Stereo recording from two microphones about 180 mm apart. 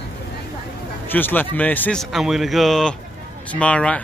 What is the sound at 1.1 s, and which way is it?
Speech, 10° left (ahead or behind).